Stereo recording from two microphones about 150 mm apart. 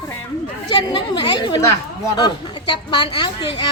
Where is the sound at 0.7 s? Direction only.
30° left (ahead or behind).